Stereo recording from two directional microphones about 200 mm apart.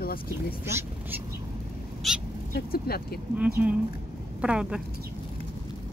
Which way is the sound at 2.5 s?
50° left (ahead or behind).